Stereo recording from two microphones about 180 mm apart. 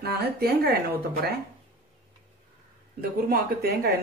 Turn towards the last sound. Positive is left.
turn(degrees=-60)  # may be behind; listen again after turning